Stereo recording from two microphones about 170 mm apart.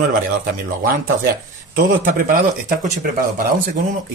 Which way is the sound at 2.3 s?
55° right (ahead or behind).